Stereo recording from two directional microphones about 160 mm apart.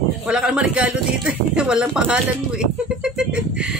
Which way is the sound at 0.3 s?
5° right (ahead or behind).